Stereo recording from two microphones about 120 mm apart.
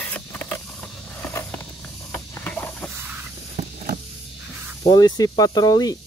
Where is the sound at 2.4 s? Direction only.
10° left (ahead or behind).